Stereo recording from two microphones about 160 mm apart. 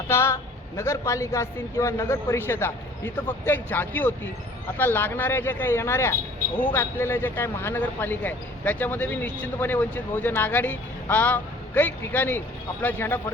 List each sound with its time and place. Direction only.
0.1 s a woman's voice: 15° left (ahead or behind)